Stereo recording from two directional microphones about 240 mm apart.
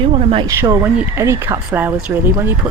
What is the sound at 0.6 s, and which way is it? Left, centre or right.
A woman's voice, centre.